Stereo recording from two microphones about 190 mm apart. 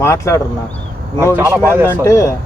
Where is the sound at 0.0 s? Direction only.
15° left (ahead or behind).